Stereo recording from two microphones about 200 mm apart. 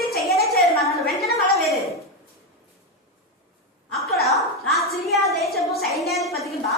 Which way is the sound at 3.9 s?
Centre (ahead or behind).